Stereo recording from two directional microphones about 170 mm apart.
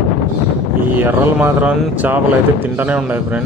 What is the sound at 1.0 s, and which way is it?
A man's voice, 10° right (ahead or behind).